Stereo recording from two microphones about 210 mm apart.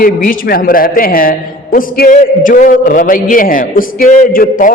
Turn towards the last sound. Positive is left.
turn(degrees=40)  # may be behind; listen again after turning